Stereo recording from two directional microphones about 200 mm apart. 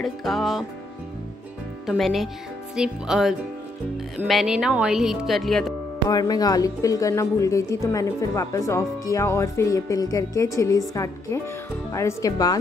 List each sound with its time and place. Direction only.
0.0 s speech: centre (ahead or behind)
1.9 s speech: centre (ahead or behind)
6.0 s a woman's voice: 20° left (ahead or behind)